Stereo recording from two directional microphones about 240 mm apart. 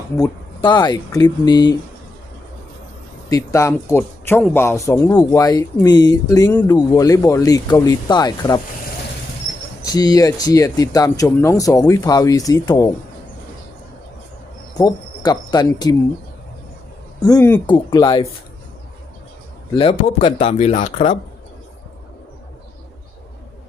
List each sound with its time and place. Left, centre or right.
0.2 s a man's voice: centre
3.2 s a man's voice: centre
9.8 s a man's voice: centre
14.8 s speech: centre
17.2 s a man's voice: centre
19.7 s speech: left